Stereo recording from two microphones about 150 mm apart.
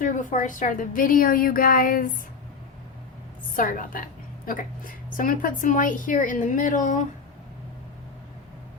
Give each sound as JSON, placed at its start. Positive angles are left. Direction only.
{"t": 0.0, "sound": "a woman's voice", "side_deg": 60}
{"t": 3.5, "sound": "a woman's voice", "side_deg": 65}